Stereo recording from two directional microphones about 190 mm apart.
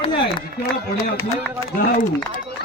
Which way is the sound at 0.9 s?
15° left (ahead or behind).